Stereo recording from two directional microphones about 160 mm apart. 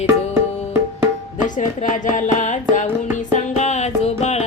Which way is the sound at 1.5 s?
50° left (ahead or behind).